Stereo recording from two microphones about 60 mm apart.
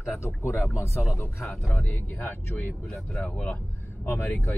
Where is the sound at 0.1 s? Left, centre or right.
Left.